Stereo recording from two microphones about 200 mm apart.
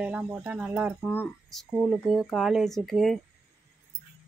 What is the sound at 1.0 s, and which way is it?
Speech, 5° left (ahead or behind).